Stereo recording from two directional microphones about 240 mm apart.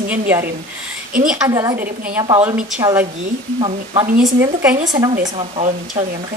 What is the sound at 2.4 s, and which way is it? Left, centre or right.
Speech, centre.